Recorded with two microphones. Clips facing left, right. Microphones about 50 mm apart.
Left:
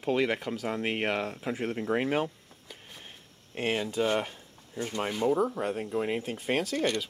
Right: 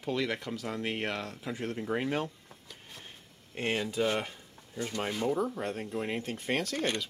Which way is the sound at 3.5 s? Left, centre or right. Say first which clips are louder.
Left 2 dB; centre.